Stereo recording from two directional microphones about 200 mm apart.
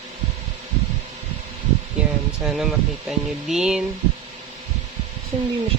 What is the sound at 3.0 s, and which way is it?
Speech, 5° right (ahead or behind).